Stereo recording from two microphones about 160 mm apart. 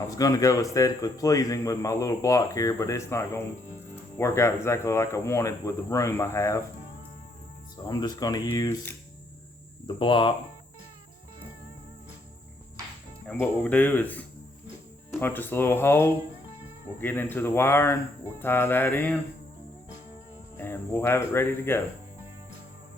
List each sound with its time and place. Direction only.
0.0 s a man's voice: 20° left (ahead or behind)
7.9 s a man's voice: 25° left (ahead or behind)
9.8 s speech: 30° left (ahead or behind)
13.4 s speech: 10° left (ahead or behind)
20.6 s speech: 15° left (ahead or behind)